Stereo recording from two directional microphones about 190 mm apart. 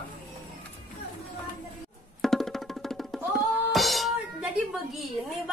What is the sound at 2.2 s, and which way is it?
Music, centre (ahead or behind).